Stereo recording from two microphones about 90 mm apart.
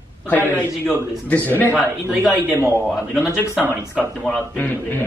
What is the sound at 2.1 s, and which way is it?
Speech, 15° right (ahead or behind).